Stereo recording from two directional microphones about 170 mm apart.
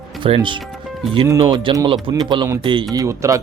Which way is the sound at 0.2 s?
30° right (ahead or behind).